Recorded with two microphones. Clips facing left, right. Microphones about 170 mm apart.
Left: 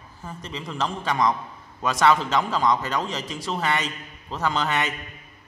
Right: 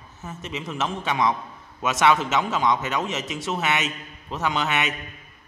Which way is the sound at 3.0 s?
20° right (ahead or behind).